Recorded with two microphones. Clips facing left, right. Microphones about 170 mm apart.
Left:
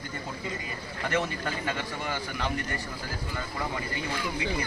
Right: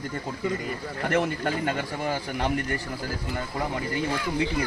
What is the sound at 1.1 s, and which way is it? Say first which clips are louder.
Speech: right 5 dB; 55° right (ahead or behind).